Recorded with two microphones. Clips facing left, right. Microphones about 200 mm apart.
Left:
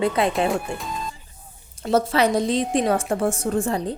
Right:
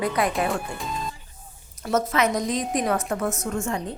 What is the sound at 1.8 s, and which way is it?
A woman's voice, 30° left (ahead or behind).